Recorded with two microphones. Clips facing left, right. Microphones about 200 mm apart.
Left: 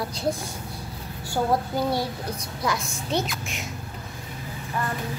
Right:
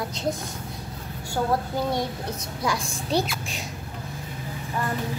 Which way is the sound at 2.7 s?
35° right (ahead or behind).